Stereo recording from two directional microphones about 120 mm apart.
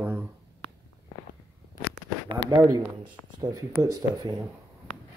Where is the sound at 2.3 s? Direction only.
35° right (ahead or behind).